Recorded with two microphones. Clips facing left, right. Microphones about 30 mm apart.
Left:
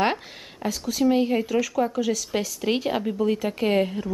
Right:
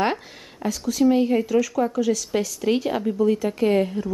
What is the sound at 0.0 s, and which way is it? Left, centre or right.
Speech, centre.